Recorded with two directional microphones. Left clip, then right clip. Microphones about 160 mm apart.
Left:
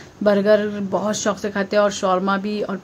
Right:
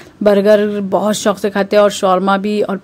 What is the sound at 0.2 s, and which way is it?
A man's voice, 45° right (ahead or behind).